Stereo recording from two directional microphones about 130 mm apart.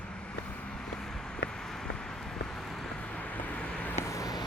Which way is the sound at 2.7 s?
5° left (ahead or behind).